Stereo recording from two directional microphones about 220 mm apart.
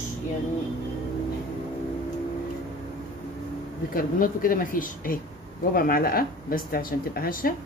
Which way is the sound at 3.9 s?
40° left (ahead or behind).